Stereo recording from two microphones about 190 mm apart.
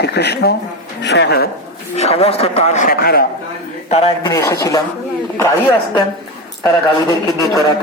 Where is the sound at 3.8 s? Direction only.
35° left (ahead or behind).